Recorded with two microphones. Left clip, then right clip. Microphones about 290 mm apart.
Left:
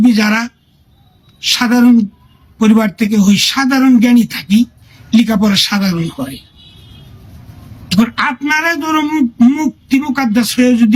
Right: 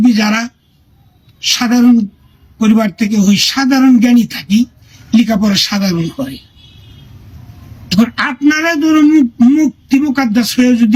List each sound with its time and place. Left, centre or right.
0.0 s speech: centre
7.9 s speech: centre